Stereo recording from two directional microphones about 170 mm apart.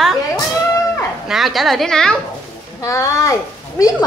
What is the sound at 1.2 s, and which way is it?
Speech, centre (ahead or behind).